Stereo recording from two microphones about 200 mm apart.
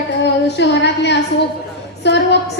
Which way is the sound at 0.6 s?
60° left (ahead or behind).